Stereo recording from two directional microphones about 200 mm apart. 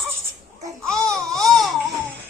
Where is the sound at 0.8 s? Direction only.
5° left (ahead or behind).